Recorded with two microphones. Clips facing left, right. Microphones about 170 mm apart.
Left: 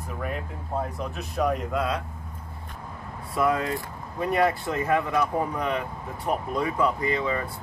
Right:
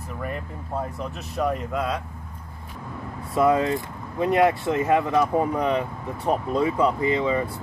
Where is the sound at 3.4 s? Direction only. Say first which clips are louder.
Right 5 dB; 25° right (ahead or behind).